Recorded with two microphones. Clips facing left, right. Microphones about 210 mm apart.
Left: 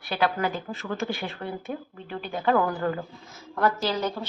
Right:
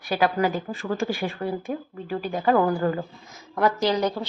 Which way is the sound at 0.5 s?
10° right (ahead or behind).